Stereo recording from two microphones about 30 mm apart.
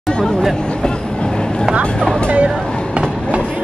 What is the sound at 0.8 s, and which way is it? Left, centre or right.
Train, left.